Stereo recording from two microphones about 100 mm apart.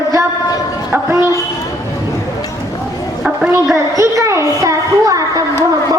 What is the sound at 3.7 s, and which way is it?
A child's voice, 30° right (ahead or behind).